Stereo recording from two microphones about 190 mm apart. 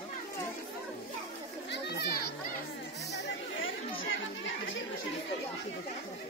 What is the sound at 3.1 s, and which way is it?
Chatter, 65° left (ahead or behind).